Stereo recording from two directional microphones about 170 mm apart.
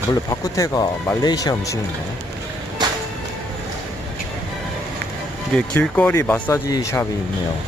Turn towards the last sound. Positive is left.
turn(degrees=20)  # may be behind; listen again after turning